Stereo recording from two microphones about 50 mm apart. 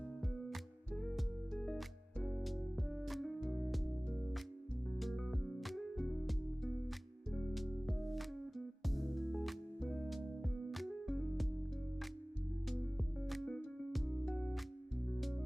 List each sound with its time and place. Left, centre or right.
0.3 s music: centre
2.4 s music: centre
4.9 s music: centre
13.2 s music: centre
14.3 s music: centre